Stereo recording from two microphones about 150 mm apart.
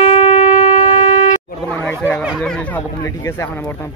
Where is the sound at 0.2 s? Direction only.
60° left (ahead or behind).